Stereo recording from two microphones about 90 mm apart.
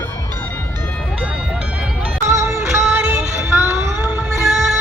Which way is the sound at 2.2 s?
30° right (ahead or behind).